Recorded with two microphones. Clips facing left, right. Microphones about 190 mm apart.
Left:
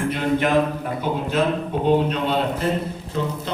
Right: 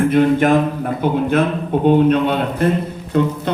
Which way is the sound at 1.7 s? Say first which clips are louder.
Right 9 dB; 55° right (ahead or behind).